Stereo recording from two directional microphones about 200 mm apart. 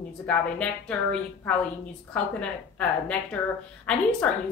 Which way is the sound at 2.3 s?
5° left (ahead or behind).